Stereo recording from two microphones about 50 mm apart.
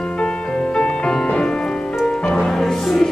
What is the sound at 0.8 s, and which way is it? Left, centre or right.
Music, centre.